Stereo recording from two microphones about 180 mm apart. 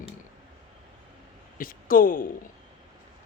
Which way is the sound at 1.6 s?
50° left (ahead or behind).